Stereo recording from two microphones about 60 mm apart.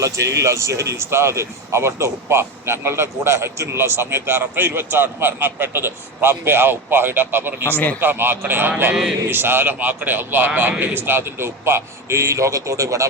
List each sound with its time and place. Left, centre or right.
0.0 s speech: right
7.7 s a man's voice: left
8.0 s a man's voice: right
9.7 s speech: right